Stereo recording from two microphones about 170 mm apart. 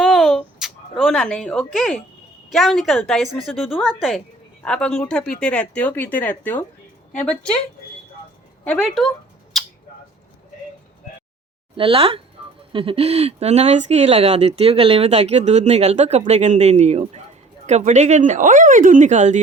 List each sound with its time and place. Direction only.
0.0 s a sound: centre (ahead or behind)
2.5 s a woman's voice: centre (ahead or behind)
8.8 s rodents: centre (ahead or behind)
11.8 s speech: 35° right (ahead or behind)